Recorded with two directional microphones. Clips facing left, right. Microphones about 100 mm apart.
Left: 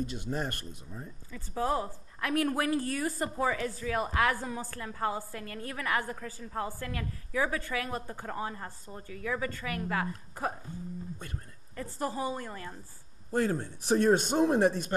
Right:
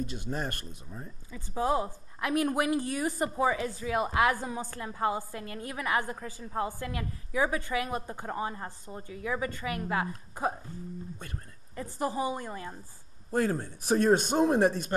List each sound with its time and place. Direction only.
1.3 s a woman's voice: 15° right (ahead or behind)
11.7 s a woman's voice: 15° right (ahead or behind)
13.3 s a man's voice: 45° right (ahead or behind)